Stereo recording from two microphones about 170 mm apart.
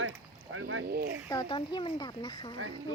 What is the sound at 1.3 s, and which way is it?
Speech, 25° left (ahead or behind).